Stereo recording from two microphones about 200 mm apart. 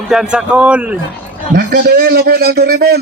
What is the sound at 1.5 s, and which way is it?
A man's voice, 50° right (ahead or behind).